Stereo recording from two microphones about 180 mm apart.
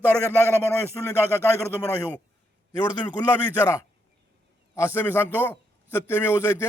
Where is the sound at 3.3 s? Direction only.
15° left (ahead or behind).